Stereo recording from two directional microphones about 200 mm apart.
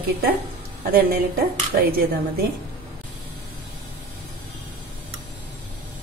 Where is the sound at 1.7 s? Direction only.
35° right (ahead or behind).